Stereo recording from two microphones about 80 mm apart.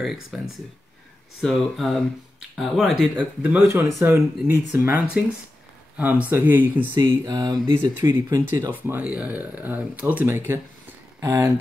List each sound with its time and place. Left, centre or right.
0.0 s speech: centre
1.4 s speech: centre
3.2 s speech: right
7.0 s speech: right
8.0 s speech: right
8.7 s speech: right